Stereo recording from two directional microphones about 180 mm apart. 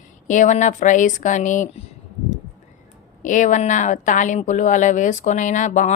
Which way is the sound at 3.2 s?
45° left (ahead or behind).